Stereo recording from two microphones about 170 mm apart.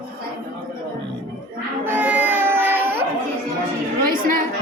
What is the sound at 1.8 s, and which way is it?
Music, 10° right (ahead or behind).